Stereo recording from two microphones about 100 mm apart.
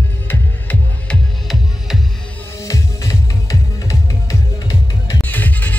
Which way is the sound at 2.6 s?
35° left (ahead or behind).